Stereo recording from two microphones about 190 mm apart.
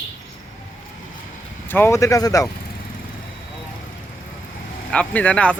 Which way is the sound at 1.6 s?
10° left (ahead or behind).